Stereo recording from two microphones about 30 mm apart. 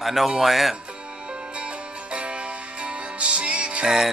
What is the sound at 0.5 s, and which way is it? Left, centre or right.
Speech, centre.